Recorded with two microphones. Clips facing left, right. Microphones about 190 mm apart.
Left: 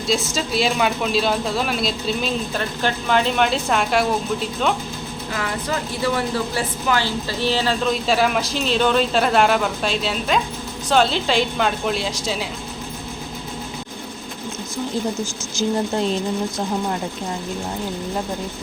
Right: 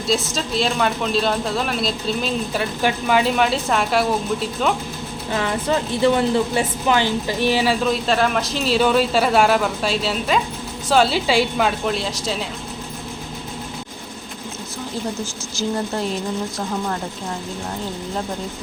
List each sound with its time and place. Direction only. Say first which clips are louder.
0.1 s speech: even; centre (ahead or behind)
5.4 s speech: right 4 dB; 25° right (ahead or behind); by 12.5 s centre (ahead or behind)
15.5 s speech: left 2 dB; 20° left (ahead or behind)